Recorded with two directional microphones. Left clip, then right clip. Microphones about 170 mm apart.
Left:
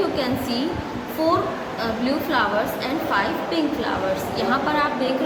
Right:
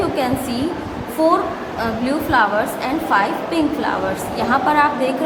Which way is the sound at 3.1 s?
25° right (ahead or behind).